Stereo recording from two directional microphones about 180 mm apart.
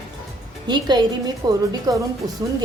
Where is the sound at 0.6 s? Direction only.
25° right (ahead or behind).